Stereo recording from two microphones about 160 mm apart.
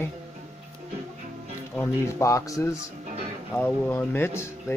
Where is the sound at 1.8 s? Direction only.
20° left (ahead or behind).